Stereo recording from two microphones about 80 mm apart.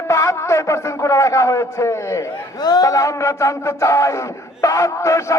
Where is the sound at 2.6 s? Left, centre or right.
Left.